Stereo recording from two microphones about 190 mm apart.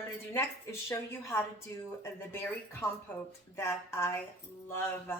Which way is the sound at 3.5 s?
15° left (ahead or behind).